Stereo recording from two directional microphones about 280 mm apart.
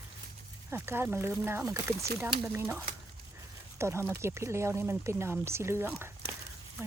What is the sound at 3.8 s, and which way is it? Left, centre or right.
Speech, centre.